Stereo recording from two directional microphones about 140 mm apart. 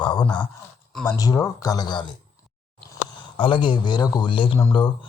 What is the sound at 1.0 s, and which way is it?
Speech, 25° left (ahead or behind).